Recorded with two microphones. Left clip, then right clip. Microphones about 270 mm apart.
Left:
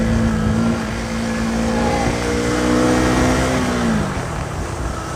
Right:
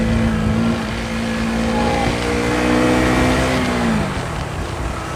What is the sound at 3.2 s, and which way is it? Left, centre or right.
Music, centre.